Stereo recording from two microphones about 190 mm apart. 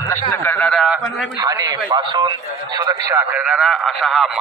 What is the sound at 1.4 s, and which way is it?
A man's voice, 20° right (ahead or behind).